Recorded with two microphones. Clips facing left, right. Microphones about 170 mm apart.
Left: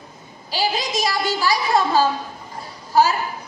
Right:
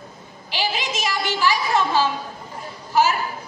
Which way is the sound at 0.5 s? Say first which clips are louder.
Left 3 dB; 35° left (ahead or behind).